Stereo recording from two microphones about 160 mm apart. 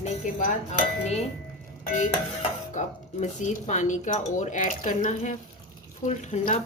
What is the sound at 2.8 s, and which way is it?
Speech, 50° left (ahead or behind).